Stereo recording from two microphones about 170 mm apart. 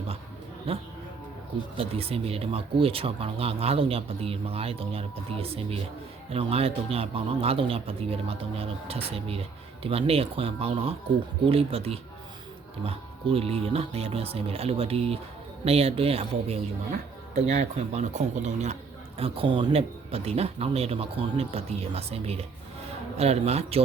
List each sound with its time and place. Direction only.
0.7 s speech: 35° right (ahead or behind)